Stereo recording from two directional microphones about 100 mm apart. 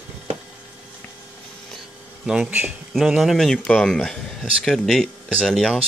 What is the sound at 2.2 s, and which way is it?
Speech, 10° right (ahead or behind).